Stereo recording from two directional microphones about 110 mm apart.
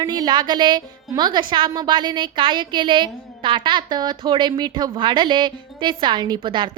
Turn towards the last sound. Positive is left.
turn(degrees=-45)  # may be behind; listen again after turning